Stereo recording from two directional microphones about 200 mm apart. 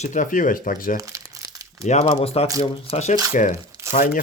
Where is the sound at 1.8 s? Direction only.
35° left (ahead or behind).